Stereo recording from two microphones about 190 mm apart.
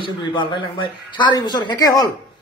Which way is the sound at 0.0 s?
25° left (ahead or behind).